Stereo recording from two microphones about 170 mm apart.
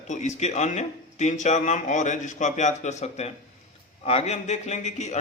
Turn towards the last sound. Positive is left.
turn(degrees=45)  # may be behind; listen again after turning